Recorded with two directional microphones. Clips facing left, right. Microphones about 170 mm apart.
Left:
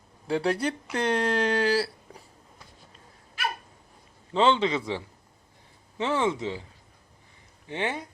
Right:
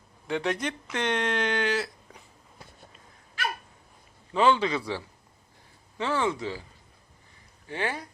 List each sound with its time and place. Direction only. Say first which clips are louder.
0.3 s speech: left 3 dB; 35° left (ahead or behind)
4.4 s a man's voice: left 1 dB; 25° left (ahead or behind)
7.7 s a man's voice: left 1 dB; 25° left (ahead or behind)